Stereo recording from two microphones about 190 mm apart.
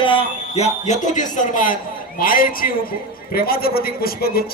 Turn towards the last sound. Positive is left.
turn(degrees=50)  # may be behind; listen again after turning